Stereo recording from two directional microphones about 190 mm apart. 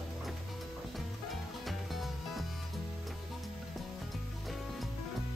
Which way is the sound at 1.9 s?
Centre (ahead or behind).